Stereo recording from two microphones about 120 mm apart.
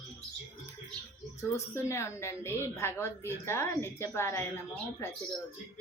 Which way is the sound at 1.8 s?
25° left (ahead or behind).